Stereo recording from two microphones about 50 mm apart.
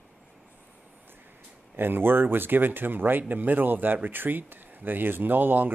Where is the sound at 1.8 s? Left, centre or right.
Right.